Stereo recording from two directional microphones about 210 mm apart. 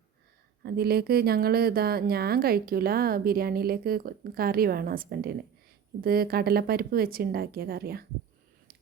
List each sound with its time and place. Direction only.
0.6 s speech: 50° right (ahead or behind)